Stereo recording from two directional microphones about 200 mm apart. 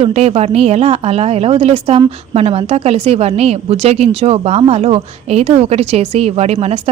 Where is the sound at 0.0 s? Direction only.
30° right (ahead or behind).